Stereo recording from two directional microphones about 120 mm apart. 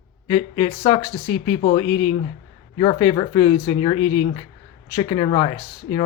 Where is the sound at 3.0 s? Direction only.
35° left (ahead or behind).